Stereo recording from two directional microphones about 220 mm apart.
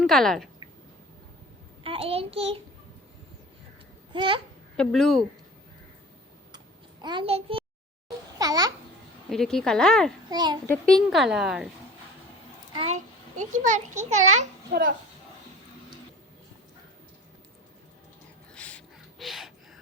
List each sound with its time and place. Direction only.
0.0 s speech: centre (ahead or behind)
1.8 s a child's voice: 25° right (ahead or behind)
4.1 s a child's voice: 20° right (ahead or behind)
4.8 s a woman's voice: centre (ahead or behind)
7.0 s a child's voice: 20° right (ahead or behind)
9.3 s a woman's voice: centre (ahead or behind)
10.2 s a child's voice: 20° right (ahead or behind)
10.7 s a woman's voice: 5° left (ahead or behind)
12.7 s a child's voice: 30° right (ahead or behind)
18.5 s a sound: 5° left (ahead or behind)
19.2 s gasp: centre (ahead or behind)